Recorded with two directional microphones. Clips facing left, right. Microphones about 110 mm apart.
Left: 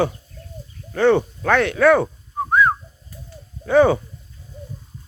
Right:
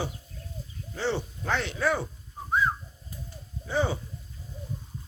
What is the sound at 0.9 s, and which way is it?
Whistling, 60° left (ahead or behind).